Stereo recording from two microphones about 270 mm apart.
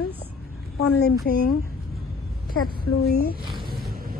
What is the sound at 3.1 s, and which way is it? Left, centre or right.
Speech, left.